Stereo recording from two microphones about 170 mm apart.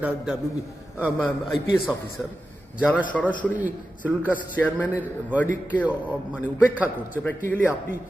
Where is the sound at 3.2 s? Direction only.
5° left (ahead or behind).